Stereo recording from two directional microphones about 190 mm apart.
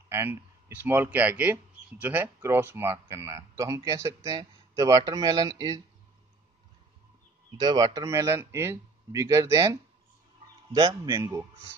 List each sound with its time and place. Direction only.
0.1 s speech: 10° right (ahead or behind)
7.5 s speech: 20° right (ahead or behind)
11.1 s speech: 15° right (ahead or behind)